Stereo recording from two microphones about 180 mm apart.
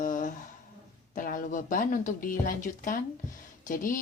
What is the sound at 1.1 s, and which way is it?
A woman's voice, 50° left (ahead or behind).